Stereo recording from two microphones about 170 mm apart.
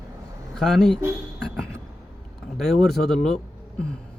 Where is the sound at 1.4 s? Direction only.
5° left (ahead or behind).